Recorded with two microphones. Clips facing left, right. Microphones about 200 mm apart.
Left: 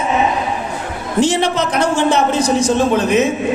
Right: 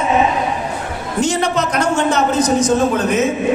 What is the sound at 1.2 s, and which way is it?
A man's voice, 30° left (ahead or behind).